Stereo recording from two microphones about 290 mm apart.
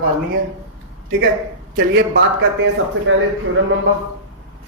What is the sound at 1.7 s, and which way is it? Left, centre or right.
Speech, right.